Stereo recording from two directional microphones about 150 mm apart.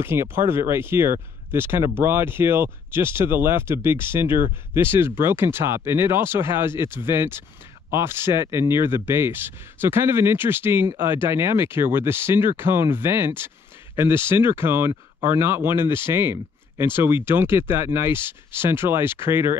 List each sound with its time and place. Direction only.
0.0 s speech: 15° right (ahead or behind)